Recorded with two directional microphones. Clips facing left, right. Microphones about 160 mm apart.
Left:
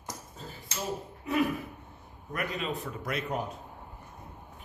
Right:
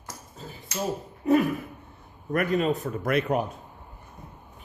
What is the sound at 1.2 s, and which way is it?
A man's voice, 45° right (ahead or behind).